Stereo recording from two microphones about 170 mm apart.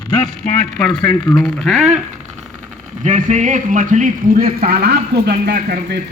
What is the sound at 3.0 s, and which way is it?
A man's voice, 45° right (ahead or behind).